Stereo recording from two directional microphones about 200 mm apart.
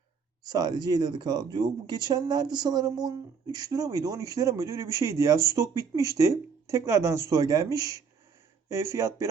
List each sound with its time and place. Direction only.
0.4 s speech: 20° right (ahead or behind)